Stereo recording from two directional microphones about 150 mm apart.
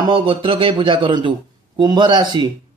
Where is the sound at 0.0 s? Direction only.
35° right (ahead or behind).